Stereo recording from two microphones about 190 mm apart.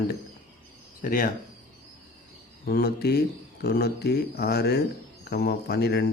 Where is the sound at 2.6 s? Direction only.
55° left (ahead or behind).